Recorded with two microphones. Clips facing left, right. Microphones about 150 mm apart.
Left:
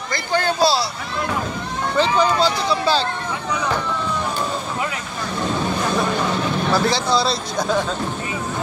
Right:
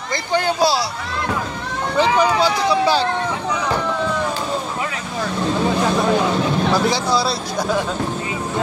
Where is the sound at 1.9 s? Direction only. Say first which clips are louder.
Right 1 dB; 15° right (ahead or behind).